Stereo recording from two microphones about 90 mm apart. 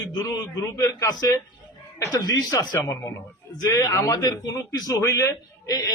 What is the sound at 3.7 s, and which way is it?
A man's voice, 40° left (ahead or behind).